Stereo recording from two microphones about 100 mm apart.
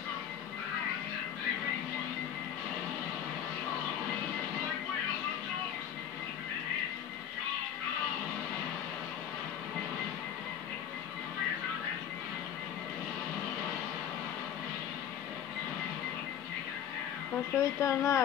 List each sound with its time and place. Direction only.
17.6 s speech: 30° left (ahead or behind)